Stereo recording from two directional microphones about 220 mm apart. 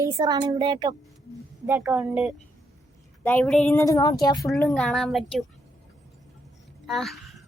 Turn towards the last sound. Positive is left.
turn(degrees=0)  # may be behind; listen again after turning